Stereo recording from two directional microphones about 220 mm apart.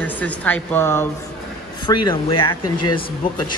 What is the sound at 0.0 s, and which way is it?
Speech, 10° left (ahead or behind).